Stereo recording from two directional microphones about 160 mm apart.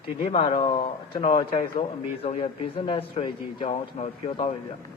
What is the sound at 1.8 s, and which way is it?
A man's voice, 35° left (ahead or behind).